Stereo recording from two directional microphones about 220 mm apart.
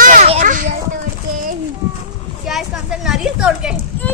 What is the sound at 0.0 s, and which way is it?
Children playing, 35° right (ahead or behind).